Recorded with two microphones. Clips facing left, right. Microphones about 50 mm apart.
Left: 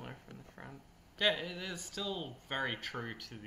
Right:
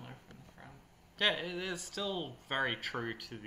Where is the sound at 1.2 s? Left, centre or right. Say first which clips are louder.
Even; centre.